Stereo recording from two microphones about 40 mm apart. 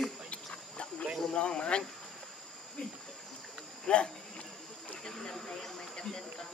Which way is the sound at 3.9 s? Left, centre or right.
Left.